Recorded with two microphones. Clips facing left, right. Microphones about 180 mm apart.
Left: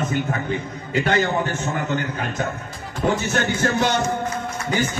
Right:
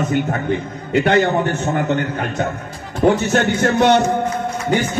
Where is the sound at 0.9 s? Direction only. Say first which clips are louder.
Right 5 dB; 65° right (ahead or behind).